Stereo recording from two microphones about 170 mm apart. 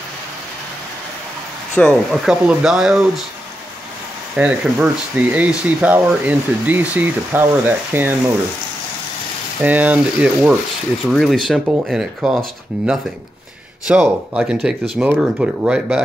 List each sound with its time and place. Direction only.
1.8 s speech: centre (ahead or behind)
4.4 s speech: 10° right (ahead or behind)
9.6 s speech: 10° right (ahead or behind)